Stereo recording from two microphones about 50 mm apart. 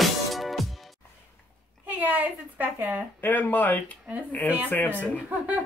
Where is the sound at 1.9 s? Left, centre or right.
Right.